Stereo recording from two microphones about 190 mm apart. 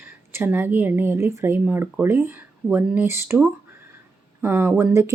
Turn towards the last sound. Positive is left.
turn(degrees=-15)  # may be behind; listen again after turning